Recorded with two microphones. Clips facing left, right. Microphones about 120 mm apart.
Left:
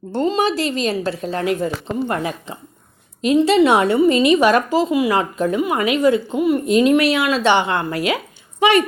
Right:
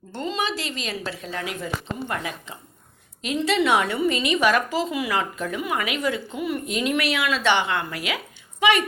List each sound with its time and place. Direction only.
0.1 s a woman's voice: 40° left (ahead or behind)